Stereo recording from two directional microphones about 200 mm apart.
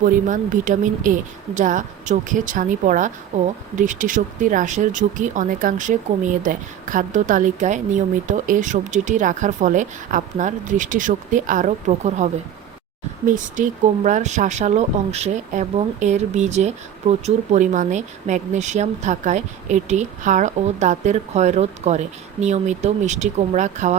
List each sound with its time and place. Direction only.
0.0 s speech: 40° right (ahead or behind)